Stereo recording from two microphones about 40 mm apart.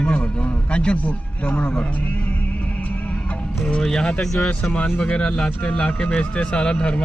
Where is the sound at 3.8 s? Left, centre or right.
Centre.